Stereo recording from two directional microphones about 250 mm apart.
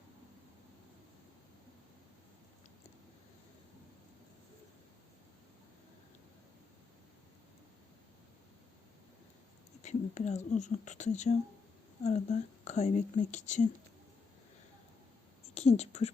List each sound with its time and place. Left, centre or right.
9.8 s speech: left
15.5 s speech: left